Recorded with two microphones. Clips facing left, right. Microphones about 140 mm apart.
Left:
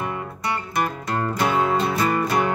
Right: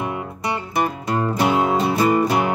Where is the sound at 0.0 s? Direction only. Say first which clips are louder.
Right 2 dB; 20° right (ahead or behind).